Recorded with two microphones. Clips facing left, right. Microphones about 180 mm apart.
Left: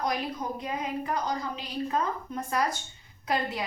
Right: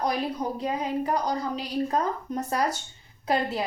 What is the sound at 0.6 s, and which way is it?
A woman's voice, 35° right (ahead or behind).